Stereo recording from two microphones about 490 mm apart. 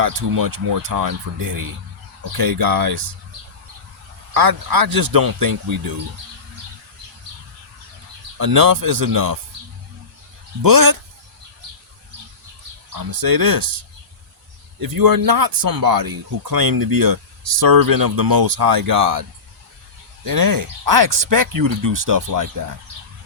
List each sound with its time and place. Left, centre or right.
0.0 s speech: right
4.4 s speech: right
8.4 s speech: right
10.6 s speech: right
12.9 s speech: right
14.8 s speech: right
20.2 s speech: right